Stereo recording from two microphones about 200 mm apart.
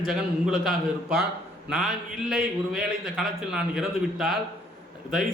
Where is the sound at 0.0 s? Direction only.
Centre (ahead or behind).